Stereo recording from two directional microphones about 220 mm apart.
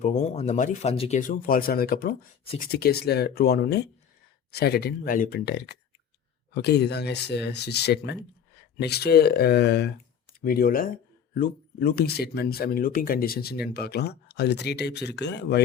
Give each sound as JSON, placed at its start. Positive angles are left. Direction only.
{"t": 0.0, "sound": "speech", "side_deg": 30}